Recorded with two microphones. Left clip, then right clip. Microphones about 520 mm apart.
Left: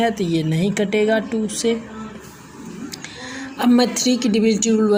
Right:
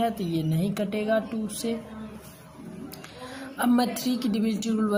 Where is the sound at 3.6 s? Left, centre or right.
Right.